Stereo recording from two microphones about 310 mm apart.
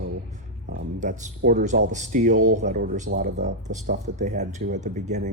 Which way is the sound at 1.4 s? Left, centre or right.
Right.